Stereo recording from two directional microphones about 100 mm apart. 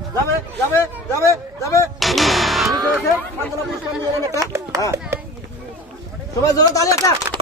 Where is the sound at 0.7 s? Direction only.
30° left (ahead or behind).